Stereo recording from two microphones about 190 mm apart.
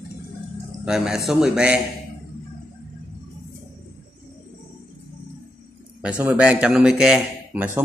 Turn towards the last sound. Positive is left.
turn(degrees=-5)  # may be behind; listen again after turning